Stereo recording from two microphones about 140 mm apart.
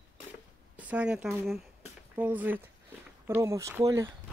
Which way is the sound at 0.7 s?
10° right (ahead or behind).